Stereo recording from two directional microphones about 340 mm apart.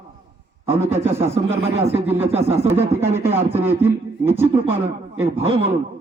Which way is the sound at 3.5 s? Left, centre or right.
Centre.